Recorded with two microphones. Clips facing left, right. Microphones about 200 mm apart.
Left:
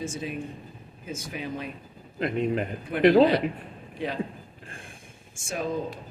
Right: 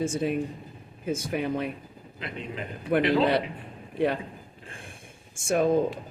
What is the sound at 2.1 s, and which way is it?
A man's voice, 50° left (ahead or behind).